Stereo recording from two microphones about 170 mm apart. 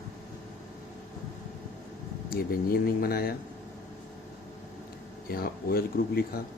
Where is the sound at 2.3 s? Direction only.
60° left (ahead or behind).